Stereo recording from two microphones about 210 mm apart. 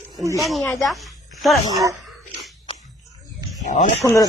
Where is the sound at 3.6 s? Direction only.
40° left (ahead or behind).